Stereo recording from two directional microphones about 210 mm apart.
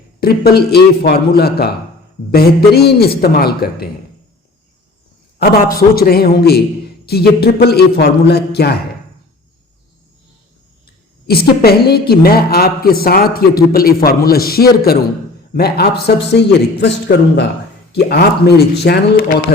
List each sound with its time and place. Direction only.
0.2 s a woman's voice: 45° left (ahead or behind)
5.4 s a woman's voice: 45° left (ahead or behind)
11.3 s a woman's voice: 45° left (ahead or behind)